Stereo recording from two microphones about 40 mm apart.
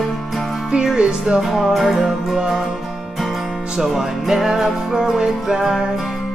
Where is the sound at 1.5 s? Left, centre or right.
Centre.